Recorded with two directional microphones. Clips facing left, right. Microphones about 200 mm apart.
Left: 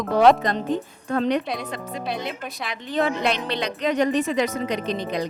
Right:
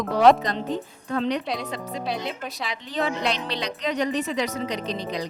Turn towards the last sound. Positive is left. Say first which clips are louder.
# left 3 dB
turn(degrees=55)  # may be behind; listen again after turning